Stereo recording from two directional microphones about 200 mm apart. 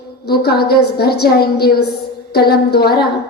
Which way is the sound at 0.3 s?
55° left (ahead or behind).